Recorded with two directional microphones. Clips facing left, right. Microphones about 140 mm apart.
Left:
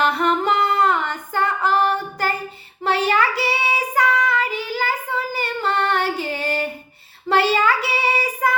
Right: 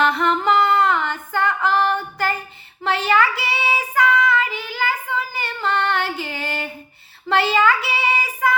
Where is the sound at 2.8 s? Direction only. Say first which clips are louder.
Even; 40° left (ahead or behind).